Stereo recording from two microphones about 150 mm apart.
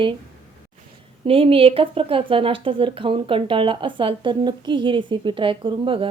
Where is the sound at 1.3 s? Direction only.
40° right (ahead or behind).